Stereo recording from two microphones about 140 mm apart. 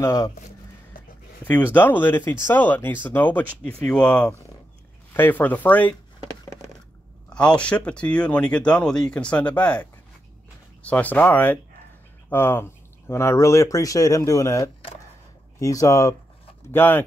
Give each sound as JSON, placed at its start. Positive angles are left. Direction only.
{"t": 0.0, "sound": "speech", "side_deg": 20}
{"t": 1.4, "sound": "speech", "side_deg": 10}
{"t": 7.3, "sound": "speech", "side_deg": 10}